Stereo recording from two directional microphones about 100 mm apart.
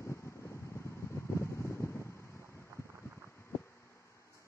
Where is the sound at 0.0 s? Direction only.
30° left (ahead or behind).